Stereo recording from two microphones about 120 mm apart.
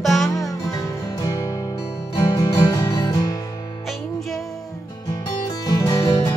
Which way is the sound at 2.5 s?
35° left (ahead or behind).